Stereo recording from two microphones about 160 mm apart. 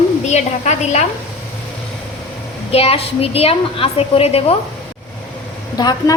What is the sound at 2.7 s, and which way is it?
A woman's voice, 40° left (ahead or behind).